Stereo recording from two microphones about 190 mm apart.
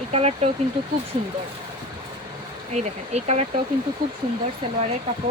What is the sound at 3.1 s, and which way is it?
Speech, 35° right (ahead or behind).